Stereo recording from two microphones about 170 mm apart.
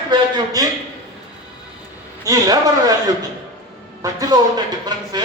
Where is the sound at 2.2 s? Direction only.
20° right (ahead or behind).